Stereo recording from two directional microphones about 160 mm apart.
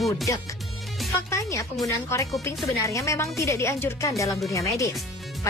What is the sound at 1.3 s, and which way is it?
Speech, 20° left (ahead or behind).